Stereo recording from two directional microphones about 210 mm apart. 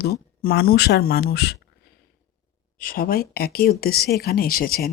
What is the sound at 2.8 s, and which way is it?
Speech, 45° left (ahead or behind).